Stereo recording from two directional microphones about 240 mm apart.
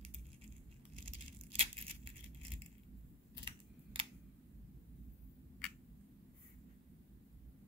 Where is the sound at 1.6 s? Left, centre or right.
Right.